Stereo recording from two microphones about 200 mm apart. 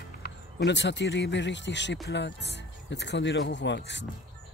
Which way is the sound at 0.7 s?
60° left (ahead or behind).